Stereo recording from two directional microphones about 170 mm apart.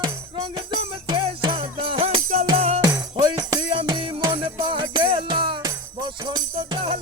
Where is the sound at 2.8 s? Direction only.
20° right (ahead or behind).